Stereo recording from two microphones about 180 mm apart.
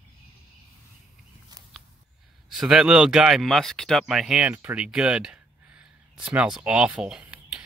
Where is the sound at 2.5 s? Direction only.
Centre (ahead or behind).